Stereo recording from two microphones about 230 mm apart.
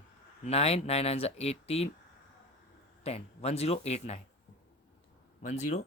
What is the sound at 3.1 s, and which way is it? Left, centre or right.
Speech, left.